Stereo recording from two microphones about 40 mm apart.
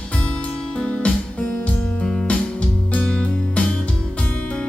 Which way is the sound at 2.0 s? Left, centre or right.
Centre.